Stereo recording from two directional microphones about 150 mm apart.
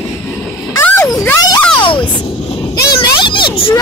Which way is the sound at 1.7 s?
35° left (ahead or behind).